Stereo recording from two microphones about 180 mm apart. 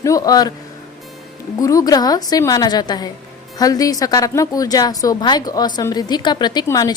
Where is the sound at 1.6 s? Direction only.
20° left (ahead or behind).